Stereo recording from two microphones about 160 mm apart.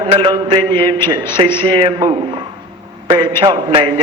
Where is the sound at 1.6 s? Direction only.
30° right (ahead or behind).